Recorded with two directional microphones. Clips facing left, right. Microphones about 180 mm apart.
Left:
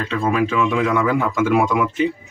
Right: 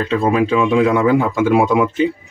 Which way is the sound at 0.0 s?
30° right (ahead or behind).